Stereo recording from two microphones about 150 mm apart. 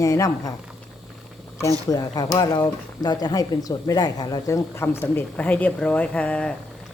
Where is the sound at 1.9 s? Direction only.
25° left (ahead or behind).